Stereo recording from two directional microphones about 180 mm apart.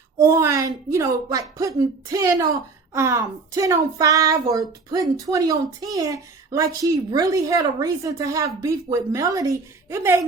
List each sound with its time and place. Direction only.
0.2 s speech: 15° right (ahead or behind)